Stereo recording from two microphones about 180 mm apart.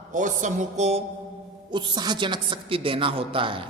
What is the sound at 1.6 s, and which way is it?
A woman's voice, 25° right (ahead or behind).